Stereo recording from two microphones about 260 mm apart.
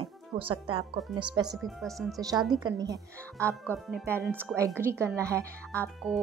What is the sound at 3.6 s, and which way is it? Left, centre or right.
Speech, centre.